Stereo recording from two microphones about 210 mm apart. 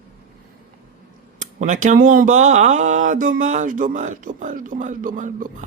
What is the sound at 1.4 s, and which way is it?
Speech, 35° right (ahead or behind).